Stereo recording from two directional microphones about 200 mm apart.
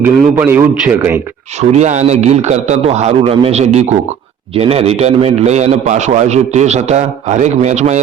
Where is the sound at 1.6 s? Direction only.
35° right (ahead or behind).